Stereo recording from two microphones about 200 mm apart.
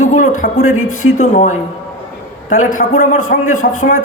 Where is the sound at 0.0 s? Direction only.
35° left (ahead or behind).